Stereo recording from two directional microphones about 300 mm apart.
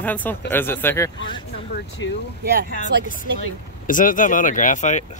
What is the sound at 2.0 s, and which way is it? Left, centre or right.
Speech, left.